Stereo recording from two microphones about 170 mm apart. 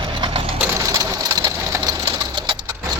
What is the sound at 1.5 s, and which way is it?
Sewing machine, 20° right (ahead or behind).